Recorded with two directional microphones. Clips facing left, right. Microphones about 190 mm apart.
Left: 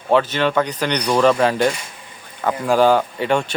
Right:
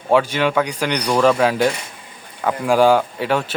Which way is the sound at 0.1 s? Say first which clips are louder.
Even; 10° right (ahead or behind).